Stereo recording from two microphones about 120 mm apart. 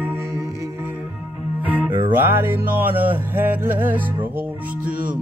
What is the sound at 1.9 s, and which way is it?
Music, 45° right (ahead or behind).